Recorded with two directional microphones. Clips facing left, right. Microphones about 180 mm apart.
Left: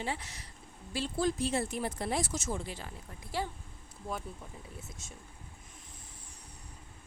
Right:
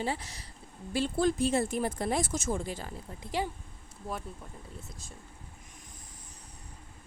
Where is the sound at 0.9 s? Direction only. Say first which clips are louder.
Right 4 dB; 55° right (ahead or behind).